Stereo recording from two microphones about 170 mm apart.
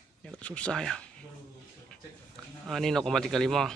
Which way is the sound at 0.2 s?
5° left (ahead or behind).